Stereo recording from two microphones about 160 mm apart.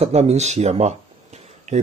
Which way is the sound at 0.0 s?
40° right (ahead or behind).